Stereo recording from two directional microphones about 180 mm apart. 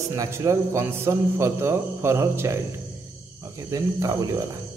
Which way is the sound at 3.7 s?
20° right (ahead or behind).